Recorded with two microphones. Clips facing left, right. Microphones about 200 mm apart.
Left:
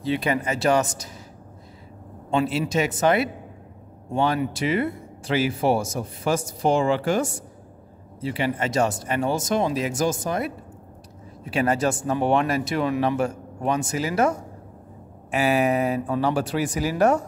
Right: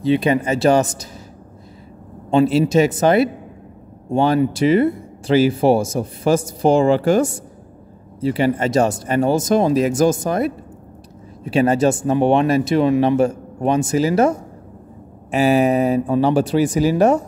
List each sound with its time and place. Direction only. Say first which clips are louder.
0.0 s speech: right 7 dB; 20° right (ahead or behind)
2.3 s speech: right 8 dB; 30° right (ahead or behind)
11.4 s speech: right 7 dB; 25° right (ahead or behind)
15.3 s speech: right 6 dB; 30° right (ahead or behind)